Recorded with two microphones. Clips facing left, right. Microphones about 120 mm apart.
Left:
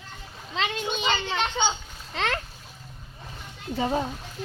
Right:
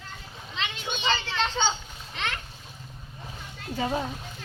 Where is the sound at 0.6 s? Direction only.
40° left (ahead or behind).